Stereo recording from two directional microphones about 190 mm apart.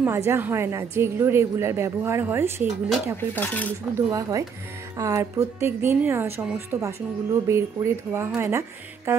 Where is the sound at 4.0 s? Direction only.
20° right (ahead or behind).